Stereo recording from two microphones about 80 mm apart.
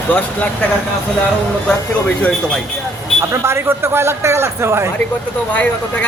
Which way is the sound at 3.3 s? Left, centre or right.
Right.